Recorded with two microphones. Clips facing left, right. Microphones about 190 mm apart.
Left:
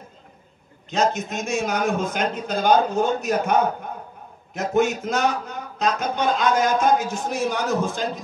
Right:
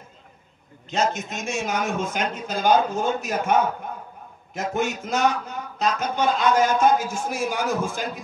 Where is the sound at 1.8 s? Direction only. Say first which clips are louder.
Left 3 dB; 35° left (ahead or behind).